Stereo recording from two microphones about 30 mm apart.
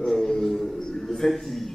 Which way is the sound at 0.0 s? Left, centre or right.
Centre.